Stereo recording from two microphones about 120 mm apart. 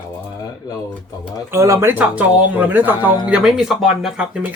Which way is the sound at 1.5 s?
25° right (ahead or behind).